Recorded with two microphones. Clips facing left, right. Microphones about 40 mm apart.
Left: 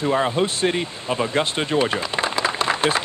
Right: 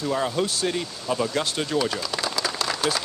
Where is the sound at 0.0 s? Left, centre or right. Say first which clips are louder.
Left 4 dB; left.